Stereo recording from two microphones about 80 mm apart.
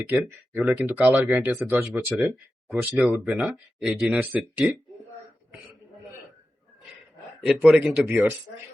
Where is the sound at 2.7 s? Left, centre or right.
Centre.